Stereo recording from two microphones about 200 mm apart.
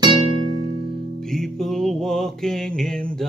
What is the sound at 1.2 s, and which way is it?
Music, centre (ahead or behind).